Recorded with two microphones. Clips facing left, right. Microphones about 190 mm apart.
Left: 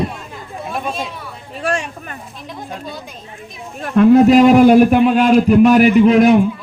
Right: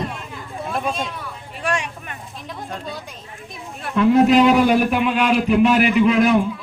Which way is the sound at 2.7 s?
Centre (ahead or behind).